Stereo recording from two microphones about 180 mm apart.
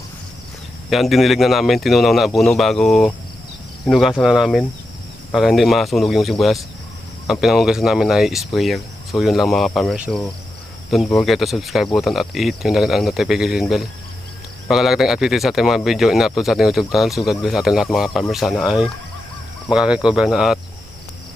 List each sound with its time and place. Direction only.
0.9 s speech: centre (ahead or behind)